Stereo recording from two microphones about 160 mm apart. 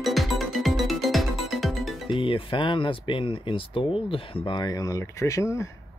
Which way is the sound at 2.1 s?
35° left (ahead or behind).